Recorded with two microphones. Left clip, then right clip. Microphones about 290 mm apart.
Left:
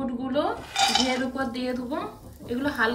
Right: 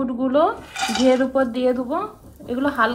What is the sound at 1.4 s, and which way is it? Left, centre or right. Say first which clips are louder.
A woman's voice: right 10 dB; centre.